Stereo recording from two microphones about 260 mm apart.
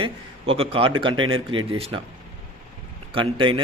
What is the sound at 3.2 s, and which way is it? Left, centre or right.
Speech, centre.